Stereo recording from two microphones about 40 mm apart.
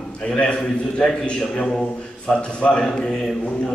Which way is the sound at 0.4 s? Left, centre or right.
Left.